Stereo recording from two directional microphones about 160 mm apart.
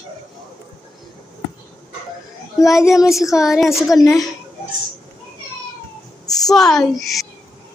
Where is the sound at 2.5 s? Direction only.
20° left (ahead or behind).